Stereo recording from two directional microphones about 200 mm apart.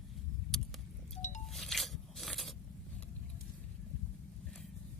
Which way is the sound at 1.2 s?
35° left (ahead or behind).